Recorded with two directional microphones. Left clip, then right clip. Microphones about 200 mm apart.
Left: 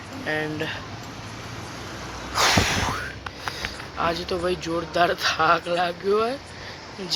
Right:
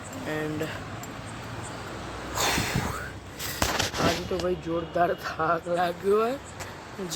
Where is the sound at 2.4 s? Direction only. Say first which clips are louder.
Left 7 dB; 5° right (ahead or behind).